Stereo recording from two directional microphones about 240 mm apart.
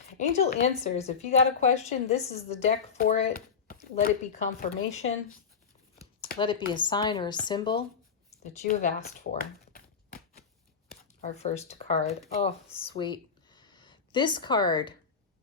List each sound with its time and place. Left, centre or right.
0.2 s a woman's voice: left
6.7 s a woman's voice: centre
8.3 s speech: left
10.8 s speech: left